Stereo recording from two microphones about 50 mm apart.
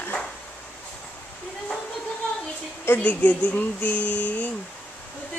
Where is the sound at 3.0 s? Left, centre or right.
Left.